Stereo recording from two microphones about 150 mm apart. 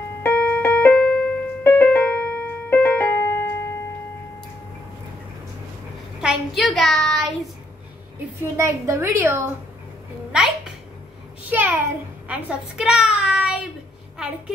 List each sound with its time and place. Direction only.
0.2 s keyboard: 10° left (ahead or behind)
6.2 s child singing: centre (ahead or behind)
8.4 s a woman's voice: 20° right (ahead or behind)
10.3 s a sound: 5° right (ahead or behind)